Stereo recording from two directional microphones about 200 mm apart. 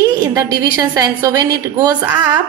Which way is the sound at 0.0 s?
20° right (ahead or behind).